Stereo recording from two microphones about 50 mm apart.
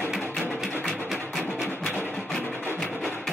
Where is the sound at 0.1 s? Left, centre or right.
Centre.